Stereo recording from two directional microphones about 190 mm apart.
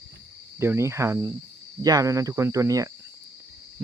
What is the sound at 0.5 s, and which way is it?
Cricket, 15° right (ahead or behind).